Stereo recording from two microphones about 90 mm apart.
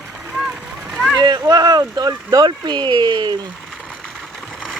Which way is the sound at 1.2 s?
50° right (ahead or behind).